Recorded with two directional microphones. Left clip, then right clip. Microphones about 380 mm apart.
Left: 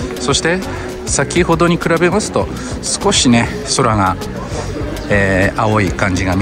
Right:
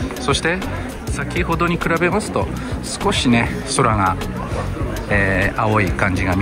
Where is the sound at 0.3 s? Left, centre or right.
Centre.